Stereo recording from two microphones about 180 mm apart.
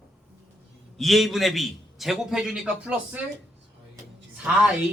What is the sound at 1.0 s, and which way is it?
A man's voice, centre (ahead or behind).